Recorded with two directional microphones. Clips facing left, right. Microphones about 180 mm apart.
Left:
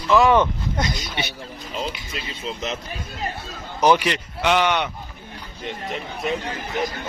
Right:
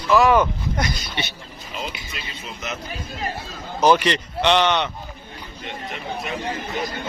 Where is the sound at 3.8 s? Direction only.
15° left (ahead or behind).